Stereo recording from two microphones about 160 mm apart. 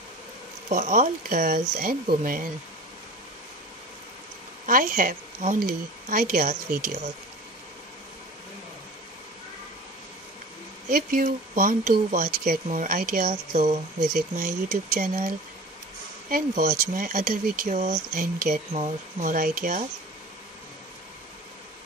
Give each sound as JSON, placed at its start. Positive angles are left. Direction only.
{"t": 0.7, "sound": "speech", "side_deg": -50}
{"t": 4.6, "sound": "speech", "side_deg": -60}
{"t": 10.9, "sound": "speech", "side_deg": -65}
{"t": 18.7, "sound": "speech", "side_deg": -50}